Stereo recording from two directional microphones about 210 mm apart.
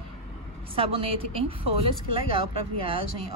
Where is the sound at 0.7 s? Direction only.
25° right (ahead or behind).